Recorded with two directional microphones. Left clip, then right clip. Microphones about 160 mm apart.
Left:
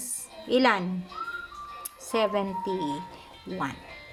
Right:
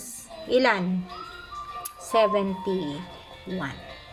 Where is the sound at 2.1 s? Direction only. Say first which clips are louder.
Right 5 dB; 15° left (ahead or behind).